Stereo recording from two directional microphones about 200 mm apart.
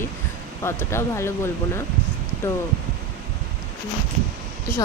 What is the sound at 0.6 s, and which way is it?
Speech, 15° left (ahead or behind).